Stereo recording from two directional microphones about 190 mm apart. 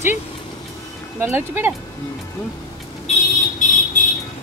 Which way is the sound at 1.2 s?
10° right (ahead or behind).